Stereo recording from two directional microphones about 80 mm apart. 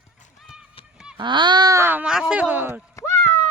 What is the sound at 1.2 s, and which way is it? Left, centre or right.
Speech, right.